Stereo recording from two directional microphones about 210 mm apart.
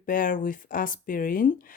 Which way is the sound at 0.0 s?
40° left (ahead or behind).